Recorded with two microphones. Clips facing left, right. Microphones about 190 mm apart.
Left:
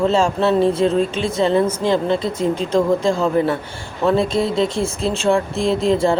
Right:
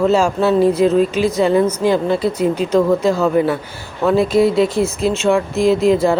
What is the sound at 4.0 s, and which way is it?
Speech, 5° right (ahead or behind).